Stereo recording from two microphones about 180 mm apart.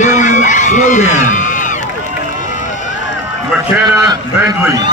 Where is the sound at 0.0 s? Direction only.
45° left (ahead or behind).